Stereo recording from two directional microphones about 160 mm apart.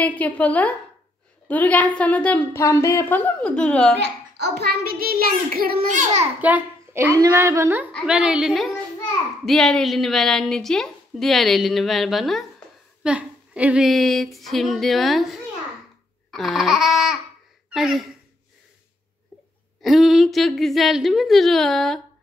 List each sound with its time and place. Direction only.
0.0 s a woman's voice: 10° left (ahead or behind)
4.0 s a child's voice: 90° right; by 6.2 s 50° right (ahead or behind)
6.4 s a woman's voice: 10° right (ahead or behind)
17.6 s a sound: 5° right (ahead or behind)
19.8 s a woman's voice: centre (ahead or behind)